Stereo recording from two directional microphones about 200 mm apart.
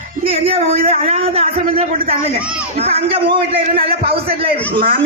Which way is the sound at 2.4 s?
5° right (ahead or behind).